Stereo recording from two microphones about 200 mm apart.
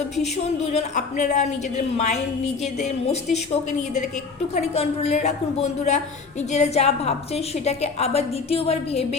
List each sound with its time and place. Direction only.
0.2 s a woman's voice: 35° left (ahead or behind)
3.3 s a woman's voice: 35° left (ahead or behind)